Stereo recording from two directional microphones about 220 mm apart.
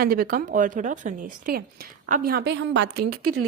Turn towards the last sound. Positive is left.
turn(degrees=-90)